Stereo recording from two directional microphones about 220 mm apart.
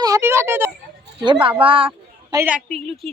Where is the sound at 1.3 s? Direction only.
25° right (ahead or behind).